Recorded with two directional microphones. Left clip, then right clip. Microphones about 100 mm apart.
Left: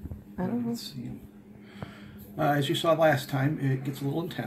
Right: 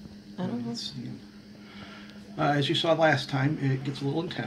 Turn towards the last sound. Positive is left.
turn(degrees=5)  # may be behind; listen again after turning